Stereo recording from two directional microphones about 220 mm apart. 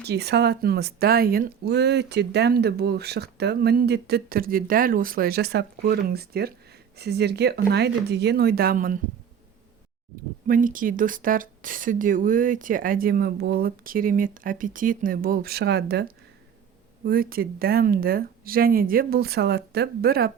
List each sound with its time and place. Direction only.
0.0 s speech: 50° right (ahead or behind)
10.4 s speech: 40° right (ahead or behind)